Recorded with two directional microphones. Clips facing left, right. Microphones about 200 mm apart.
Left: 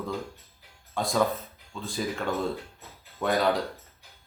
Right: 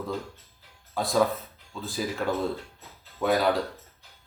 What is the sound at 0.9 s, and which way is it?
Speech, centre (ahead or behind).